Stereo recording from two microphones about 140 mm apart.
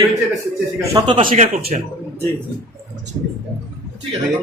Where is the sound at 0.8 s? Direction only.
25° right (ahead or behind).